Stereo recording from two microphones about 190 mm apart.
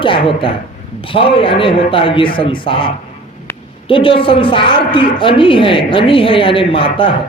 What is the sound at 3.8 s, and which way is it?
A man's voice, 30° left (ahead or behind).